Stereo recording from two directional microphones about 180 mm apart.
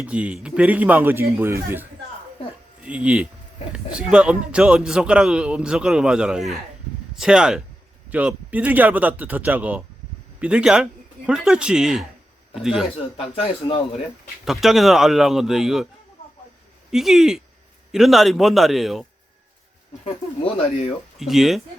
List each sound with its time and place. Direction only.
0.0 s a man's voice: 5° right (ahead or behind)
13.1 s a man's voice: 30° left (ahead or behind)
14.4 s a man's voice: centre (ahead or behind)
16.2 s a sound: 35° left (ahead or behind)
16.9 s a man's voice: centre (ahead or behind)
20.4 s a man's voice: 30° left (ahead or behind)
21.2 s a man's voice: centre (ahead or behind)